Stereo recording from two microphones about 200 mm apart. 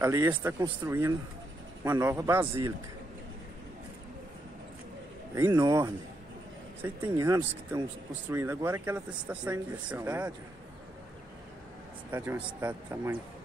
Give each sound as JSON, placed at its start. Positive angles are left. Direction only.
{"t": 0.0, "sound": "speech", "side_deg": -15}
{"t": 5.3, "sound": "speech", "side_deg": -15}
{"t": 12.1, "sound": "speech", "side_deg": -10}